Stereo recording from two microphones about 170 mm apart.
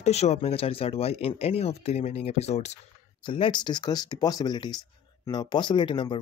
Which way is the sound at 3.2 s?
30° left (ahead or behind).